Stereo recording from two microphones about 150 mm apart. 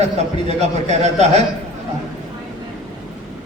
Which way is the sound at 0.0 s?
50° right (ahead or behind).